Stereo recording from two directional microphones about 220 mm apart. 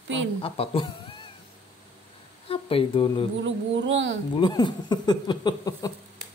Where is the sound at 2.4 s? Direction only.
25° left (ahead or behind).